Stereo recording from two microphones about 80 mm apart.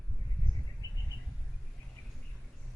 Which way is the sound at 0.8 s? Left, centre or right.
Left.